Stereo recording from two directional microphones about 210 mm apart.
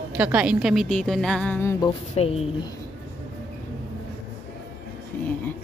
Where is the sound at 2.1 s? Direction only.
30° left (ahead or behind).